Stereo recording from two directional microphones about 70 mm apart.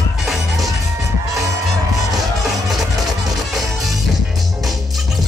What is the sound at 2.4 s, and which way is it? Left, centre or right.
Music, centre.